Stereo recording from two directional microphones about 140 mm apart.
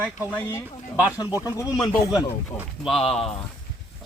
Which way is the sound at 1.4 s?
25° left (ahead or behind).